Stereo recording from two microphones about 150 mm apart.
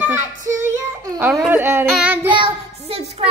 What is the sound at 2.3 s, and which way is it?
Child singing, 35° right (ahead or behind).